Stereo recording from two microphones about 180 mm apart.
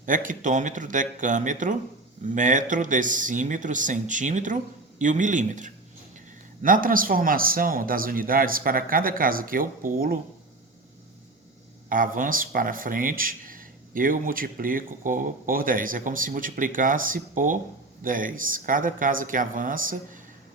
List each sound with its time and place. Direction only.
0.0 s speech: 45° right (ahead or behind)
11.9 s speech: 50° right (ahead or behind)